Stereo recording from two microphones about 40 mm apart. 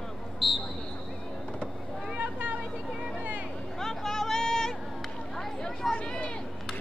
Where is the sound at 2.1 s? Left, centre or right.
Right.